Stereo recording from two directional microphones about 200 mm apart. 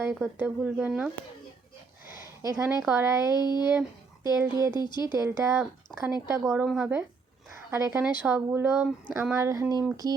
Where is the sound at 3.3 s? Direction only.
20° left (ahead or behind).